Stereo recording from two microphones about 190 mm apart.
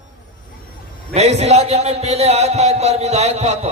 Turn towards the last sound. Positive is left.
turn(degrees=-35)  # may be behind; listen again after turning